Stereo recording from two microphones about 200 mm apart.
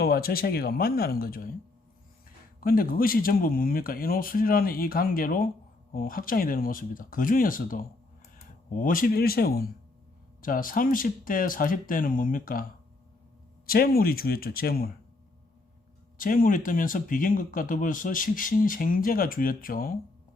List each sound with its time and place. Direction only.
0.0 s speech: 50° left (ahead or behind)
2.6 s speech: 45° left (ahead or behind)
13.7 s speech: 50° left (ahead or behind)
16.1 s speech: 45° left (ahead or behind)